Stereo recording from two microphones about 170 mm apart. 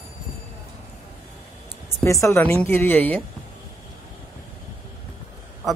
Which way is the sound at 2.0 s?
15° left (ahead or behind).